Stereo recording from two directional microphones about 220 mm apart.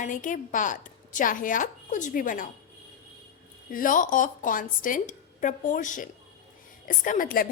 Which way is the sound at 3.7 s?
40° left (ahead or behind).